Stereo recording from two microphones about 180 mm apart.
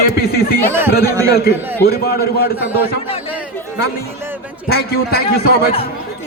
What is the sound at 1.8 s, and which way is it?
Speech, 60° left (ahead or behind).